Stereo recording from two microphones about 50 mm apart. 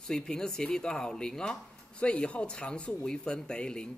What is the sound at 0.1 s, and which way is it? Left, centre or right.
A man's voice, centre.